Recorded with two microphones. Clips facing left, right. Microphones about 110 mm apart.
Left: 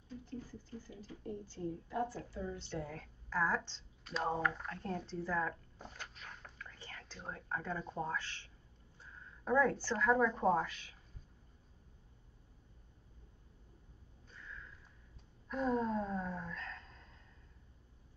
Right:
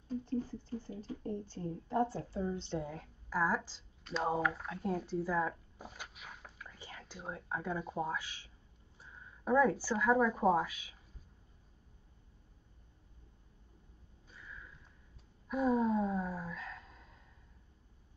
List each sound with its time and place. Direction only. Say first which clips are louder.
0.2 s a woman's voice: right 9 dB; 25° right (ahead or behind); by 11.0 s 10° right (ahead or behind)
14.3 s sniff: even; 10° right (ahead or behind)
15.4 s gasp: right 4 dB; 10° right (ahead or behind)